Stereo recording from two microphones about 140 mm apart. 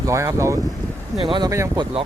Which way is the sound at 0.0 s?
20° right (ahead or behind).